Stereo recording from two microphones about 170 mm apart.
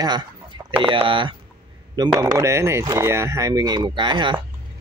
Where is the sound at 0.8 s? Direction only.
30° right (ahead or behind).